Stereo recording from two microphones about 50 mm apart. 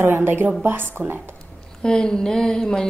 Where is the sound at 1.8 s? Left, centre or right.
Centre.